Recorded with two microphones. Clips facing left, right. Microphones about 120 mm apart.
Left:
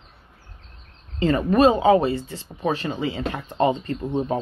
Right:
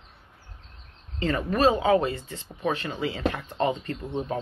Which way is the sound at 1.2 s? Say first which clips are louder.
Left 6 dB; 20° left (ahead or behind).